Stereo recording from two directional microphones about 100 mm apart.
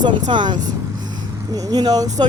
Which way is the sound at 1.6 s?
40° right (ahead or behind).